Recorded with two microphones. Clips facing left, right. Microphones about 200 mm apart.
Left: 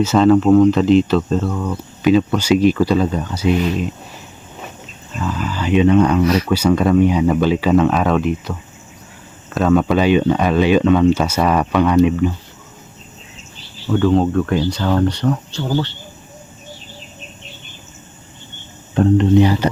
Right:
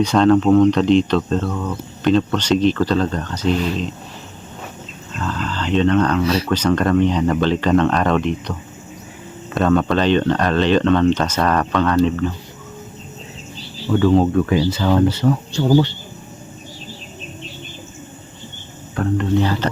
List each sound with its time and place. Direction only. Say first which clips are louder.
0.0 s speech: left 1 dB; 5° left (ahead or behind)
5.1 s speech: left 2 dB; 10° left (ahead or behind)
13.9 s speech: even; centre (ahead or behind)
18.9 s speech: left 6 dB; 20° left (ahead or behind)